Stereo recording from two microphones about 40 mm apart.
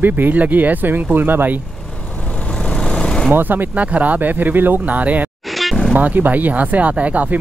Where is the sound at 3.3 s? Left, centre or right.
Right.